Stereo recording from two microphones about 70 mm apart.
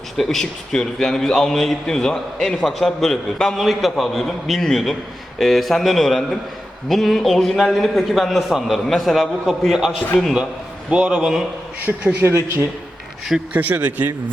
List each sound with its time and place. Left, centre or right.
0.2 s a man's voice: centre
10.8 s a man's voice: centre
12.1 s speech: right
13.5 s speech: right